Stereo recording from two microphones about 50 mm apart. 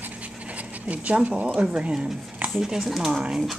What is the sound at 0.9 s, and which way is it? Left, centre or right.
Speech, right.